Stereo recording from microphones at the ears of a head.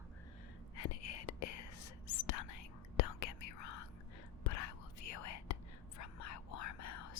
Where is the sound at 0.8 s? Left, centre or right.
Left.